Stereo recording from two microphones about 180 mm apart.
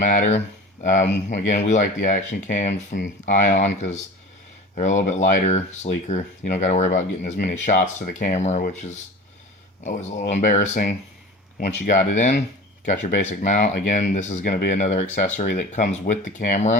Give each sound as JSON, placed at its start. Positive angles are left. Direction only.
{"t": 0.0, "sound": "speech", "side_deg": 45}
{"t": 4.7, "sound": "speech", "side_deg": 40}